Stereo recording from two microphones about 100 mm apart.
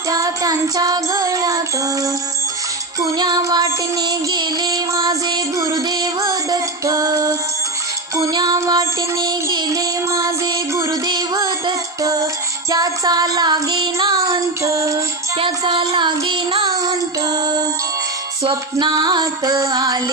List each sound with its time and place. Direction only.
0.1 s child singing: 35° right (ahead or behind)
3.2 s music: 40° right (ahead or behind)
12.7 s child singing: 40° right (ahead or behind)
14.6 s music: 30° right (ahead or behind)
15.3 s music: 60° right (ahead or behind)
15.8 s child singing: 45° right (ahead or behind)
18.5 s music: 45° right (ahead or behind)